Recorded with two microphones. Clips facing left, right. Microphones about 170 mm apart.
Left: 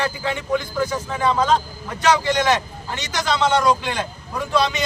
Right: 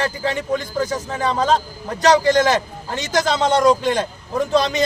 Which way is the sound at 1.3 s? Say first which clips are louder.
Even; 35° right (ahead or behind).